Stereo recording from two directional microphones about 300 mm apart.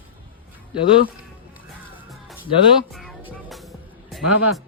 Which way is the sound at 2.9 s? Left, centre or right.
Centre.